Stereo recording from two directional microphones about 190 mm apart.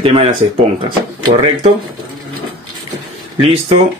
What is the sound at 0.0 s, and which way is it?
Speech, 30° right (ahead or behind).